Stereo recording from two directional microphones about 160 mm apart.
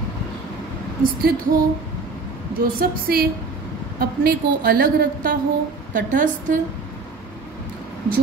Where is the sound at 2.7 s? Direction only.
65° right (ahead or behind).